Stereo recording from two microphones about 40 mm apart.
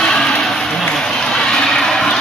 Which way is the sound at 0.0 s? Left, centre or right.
Centre.